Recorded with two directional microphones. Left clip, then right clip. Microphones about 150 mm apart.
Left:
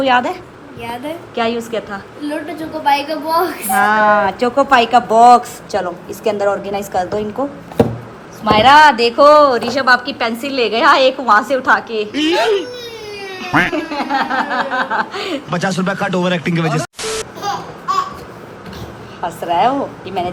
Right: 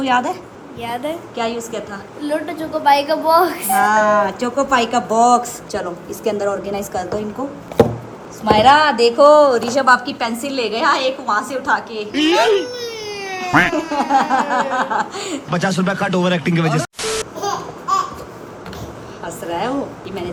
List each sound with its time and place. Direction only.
0.0 s a woman's voice: 15° right (ahead or behind)
8.4 s a woman's voice: 10° right (ahead or behind)
13.7 s speech: 20° right (ahead or behind)
14.8 s a woman's voice: 5° right (ahead or behind)
19.2 s a woman's voice: centre (ahead or behind)